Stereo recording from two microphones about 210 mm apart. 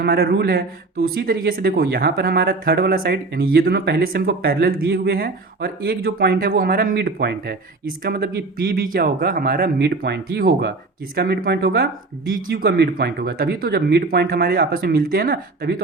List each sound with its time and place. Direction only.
0.0 s speech: 45° right (ahead or behind)